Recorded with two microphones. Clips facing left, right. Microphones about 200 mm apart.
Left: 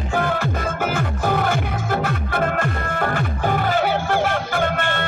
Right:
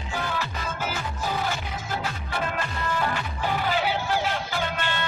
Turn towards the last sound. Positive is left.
turn(degrees=55)  # may be behind; listen again after turning